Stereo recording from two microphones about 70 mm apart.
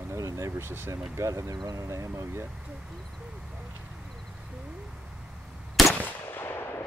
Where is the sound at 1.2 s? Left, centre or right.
Right.